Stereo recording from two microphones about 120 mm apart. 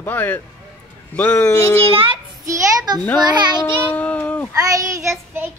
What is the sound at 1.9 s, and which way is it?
Child singing, 50° right (ahead or behind).